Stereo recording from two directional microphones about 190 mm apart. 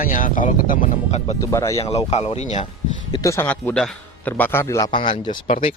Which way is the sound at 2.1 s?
35° left (ahead or behind).